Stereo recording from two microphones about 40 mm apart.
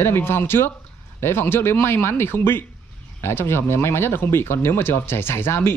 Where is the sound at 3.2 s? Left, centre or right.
Left.